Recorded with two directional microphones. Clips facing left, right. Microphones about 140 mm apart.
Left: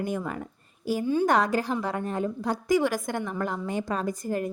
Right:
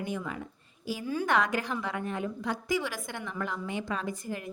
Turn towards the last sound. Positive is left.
turn(degrees=40)  # may be behind; listen again after turning